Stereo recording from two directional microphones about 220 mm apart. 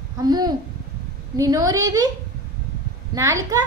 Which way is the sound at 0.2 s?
20° right (ahead or behind).